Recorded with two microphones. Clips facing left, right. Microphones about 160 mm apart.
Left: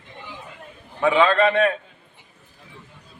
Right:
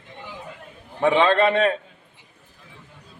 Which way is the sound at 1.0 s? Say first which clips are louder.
Even; 35° right (ahead or behind).